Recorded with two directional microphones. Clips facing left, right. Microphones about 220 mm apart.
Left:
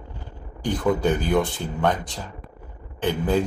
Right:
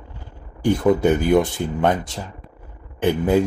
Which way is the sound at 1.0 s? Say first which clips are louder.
Right 5 dB; 20° right (ahead or behind).